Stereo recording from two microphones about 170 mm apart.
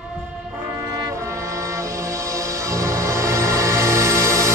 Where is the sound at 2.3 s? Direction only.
20° right (ahead or behind).